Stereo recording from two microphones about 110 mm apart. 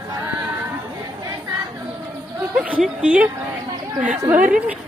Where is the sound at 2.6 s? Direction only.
10° right (ahead or behind).